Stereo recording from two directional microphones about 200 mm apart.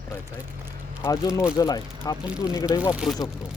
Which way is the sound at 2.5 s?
15° left (ahead or behind).